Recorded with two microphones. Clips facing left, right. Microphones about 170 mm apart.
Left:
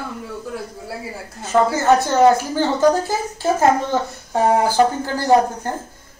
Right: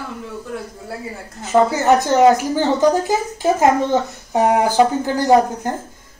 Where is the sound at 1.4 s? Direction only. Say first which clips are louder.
Right 2 dB; 15° right (ahead or behind).